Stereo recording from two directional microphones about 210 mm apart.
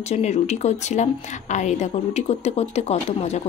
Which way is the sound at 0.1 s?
30° left (ahead or behind).